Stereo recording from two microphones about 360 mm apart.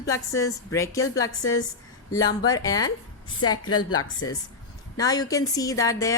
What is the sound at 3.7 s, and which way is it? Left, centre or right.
Speech, left.